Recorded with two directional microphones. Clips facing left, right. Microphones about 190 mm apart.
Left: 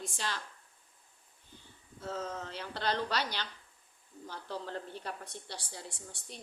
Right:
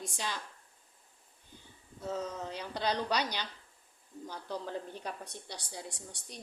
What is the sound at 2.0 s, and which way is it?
Speech, 15° right (ahead or behind).